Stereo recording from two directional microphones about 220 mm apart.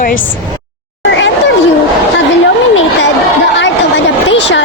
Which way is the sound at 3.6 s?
55° left (ahead or behind).